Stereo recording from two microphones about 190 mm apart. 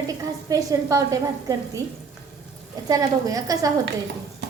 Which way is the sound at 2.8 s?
20° right (ahead or behind).